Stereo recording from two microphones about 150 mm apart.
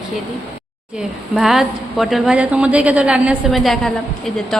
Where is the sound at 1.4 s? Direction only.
Centre (ahead or behind).